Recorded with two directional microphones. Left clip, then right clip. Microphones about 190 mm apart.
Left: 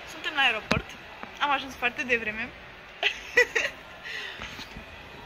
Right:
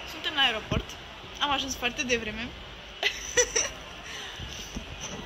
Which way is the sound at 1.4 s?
Centre (ahead or behind).